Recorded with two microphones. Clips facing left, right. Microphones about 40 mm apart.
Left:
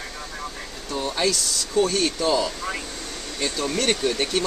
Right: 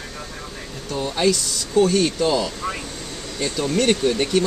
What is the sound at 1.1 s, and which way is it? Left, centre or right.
Speech, centre.